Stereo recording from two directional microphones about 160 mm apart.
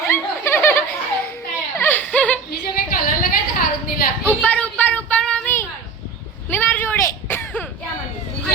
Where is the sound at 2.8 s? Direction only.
65° left (ahead or behind).